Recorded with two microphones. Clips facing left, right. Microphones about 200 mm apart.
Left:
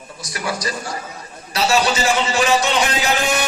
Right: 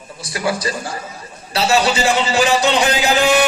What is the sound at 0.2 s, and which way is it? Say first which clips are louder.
Speech: right 4 dB; 30° right (ahead or behind).